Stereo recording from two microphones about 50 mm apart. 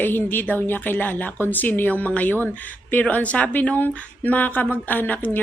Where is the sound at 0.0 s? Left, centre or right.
Left.